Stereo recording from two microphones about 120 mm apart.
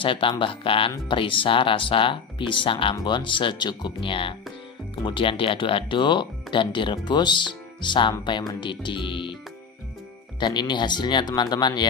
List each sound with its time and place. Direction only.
0.0 s speech: 45° left (ahead or behind)
10.4 s speech: 40° left (ahead or behind)